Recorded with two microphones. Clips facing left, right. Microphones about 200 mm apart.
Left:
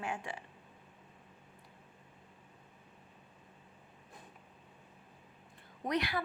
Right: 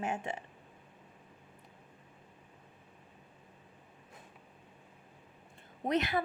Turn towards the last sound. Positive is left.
turn(degrees=-25)  # may be behind; listen again after turning